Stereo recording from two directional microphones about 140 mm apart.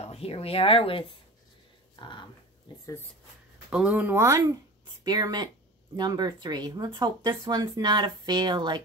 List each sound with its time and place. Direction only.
0.0 s speech: 45° left (ahead or behind)
2.0 s a sound: 35° left (ahead or behind)
3.7 s speech: 10° right (ahead or behind); by 8.8 s 35° right (ahead or behind)